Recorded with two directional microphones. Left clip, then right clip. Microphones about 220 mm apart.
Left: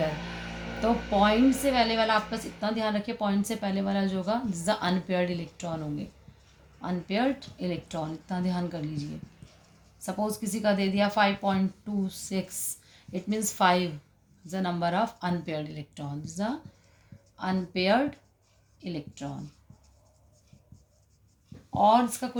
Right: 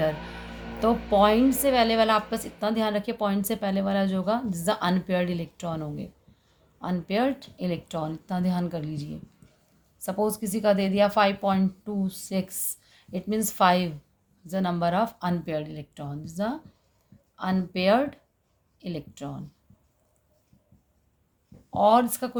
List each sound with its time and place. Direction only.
0.8 s a woman's voice: 50° right (ahead or behind)
6.8 s a woman's voice: 50° right (ahead or behind)
21.7 s a woman's voice: 55° right (ahead or behind)